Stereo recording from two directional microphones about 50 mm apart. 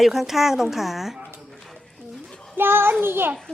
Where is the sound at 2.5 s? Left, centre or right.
Right.